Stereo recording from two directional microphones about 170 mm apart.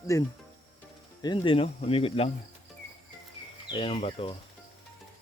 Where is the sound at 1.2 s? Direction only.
30° left (ahead or behind).